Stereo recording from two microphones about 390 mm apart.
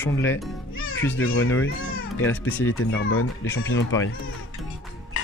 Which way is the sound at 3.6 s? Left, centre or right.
Left.